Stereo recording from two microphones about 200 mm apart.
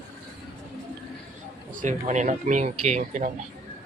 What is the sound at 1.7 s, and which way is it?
A man's voice, 35° right (ahead or behind).